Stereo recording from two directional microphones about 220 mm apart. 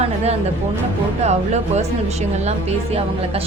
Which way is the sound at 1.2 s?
30° right (ahead or behind).